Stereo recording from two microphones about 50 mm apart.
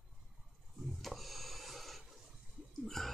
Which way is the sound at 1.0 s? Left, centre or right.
Centre.